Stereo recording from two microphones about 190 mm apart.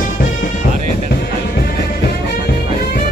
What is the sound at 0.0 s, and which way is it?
Music, 45° left (ahead or behind).